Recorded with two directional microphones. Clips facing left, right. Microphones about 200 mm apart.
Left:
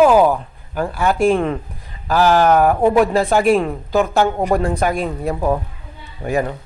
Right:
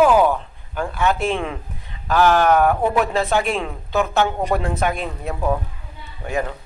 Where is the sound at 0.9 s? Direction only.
Centre (ahead or behind).